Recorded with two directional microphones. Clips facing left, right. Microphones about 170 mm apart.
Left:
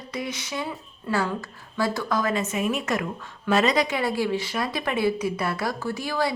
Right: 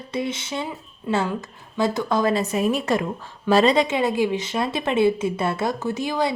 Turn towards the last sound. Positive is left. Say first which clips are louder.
# right 3 dB
turn(degrees=-20)  # may be behind; listen again after turning